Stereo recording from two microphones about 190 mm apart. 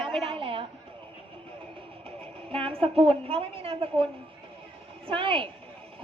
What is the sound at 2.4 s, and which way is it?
A woman's voice, 30° right (ahead or behind).